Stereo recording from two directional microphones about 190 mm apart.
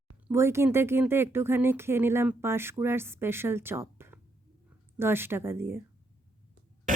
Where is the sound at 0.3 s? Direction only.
15° right (ahead or behind).